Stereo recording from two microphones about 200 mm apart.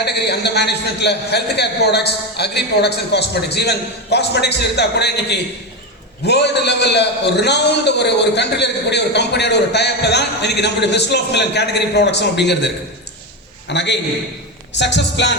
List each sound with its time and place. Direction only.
0.0 s a man's voice: 55° left (ahead or behind)